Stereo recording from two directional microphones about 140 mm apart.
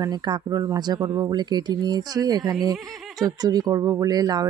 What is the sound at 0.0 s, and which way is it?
Speech, 30° right (ahead or behind).